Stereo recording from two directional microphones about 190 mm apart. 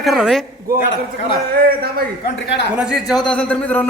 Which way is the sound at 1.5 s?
55° right (ahead or behind).